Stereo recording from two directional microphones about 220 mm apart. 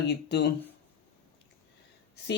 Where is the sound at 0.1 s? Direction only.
50° left (ahead or behind).